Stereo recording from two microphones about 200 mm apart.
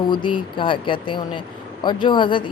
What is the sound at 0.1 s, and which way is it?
A woman's voice, 25° left (ahead or behind).